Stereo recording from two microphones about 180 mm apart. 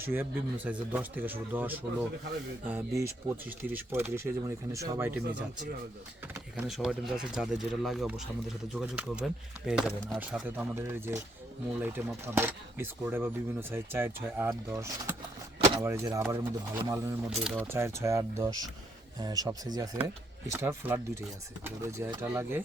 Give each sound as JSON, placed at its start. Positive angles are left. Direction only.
{"t": 0.0, "sound": "speech", "side_deg": -10}
{"t": 6.3, "sound": "speech", "side_deg": 0}
{"t": 15.5, "sound": "a sound", "side_deg": -30}
{"t": 15.8, "sound": "speech", "side_deg": -15}
{"t": 17.2, "sound": "speech", "side_deg": -5}
{"t": 17.7, "sound": "speech", "side_deg": -15}